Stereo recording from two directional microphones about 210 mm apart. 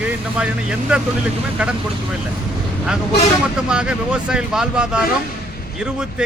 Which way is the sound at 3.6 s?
5° right (ahead or behind).